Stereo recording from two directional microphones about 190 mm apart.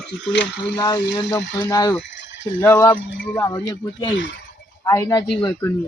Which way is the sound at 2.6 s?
15° left (ahead or behind).